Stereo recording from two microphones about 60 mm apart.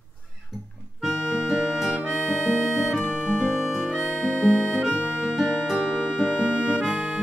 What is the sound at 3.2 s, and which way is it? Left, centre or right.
Music, centre.